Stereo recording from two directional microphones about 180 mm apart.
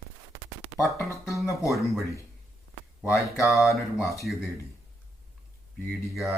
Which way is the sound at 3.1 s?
15° left (ahead or behind).